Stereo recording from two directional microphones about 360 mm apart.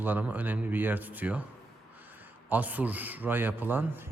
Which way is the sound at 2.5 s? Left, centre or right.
Centre.